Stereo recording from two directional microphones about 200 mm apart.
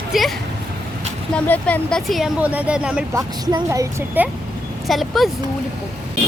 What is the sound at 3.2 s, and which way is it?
A woman's voice, 15° right (ahead or behind).